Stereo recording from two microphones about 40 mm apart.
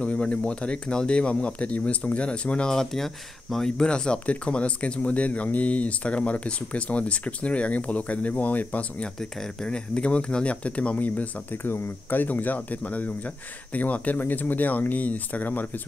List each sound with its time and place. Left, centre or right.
0.0 s speech: left
2.7 s speech: centre
3.7 s speech: left
9.0 s speech: centre
9.9 s speech: left
11.5 s speech: left
14.2 s speech: left